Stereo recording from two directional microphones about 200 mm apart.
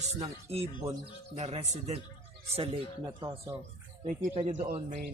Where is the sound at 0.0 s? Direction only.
35° right (ahead or behind).